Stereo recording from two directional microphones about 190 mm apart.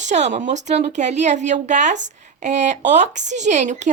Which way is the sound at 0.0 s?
40° right (ahead or behind).